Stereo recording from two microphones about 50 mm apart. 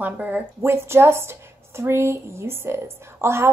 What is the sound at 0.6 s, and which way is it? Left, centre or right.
A woman's voice, right.